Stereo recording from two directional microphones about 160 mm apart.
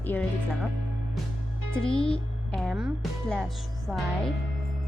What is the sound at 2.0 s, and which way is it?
Speech, 5° left (ahead or behind).